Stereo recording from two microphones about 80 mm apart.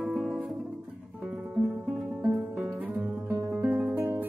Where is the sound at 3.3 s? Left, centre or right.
Right.